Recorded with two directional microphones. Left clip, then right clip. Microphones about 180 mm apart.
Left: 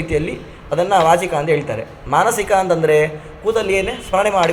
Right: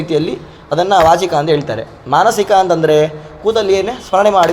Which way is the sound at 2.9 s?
45° right (ahead or behind).